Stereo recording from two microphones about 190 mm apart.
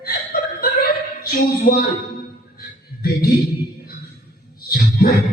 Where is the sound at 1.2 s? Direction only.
50° left (ahead or behind).